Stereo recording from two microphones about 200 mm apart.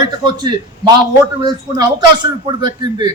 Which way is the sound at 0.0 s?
20° right (ahead or behind).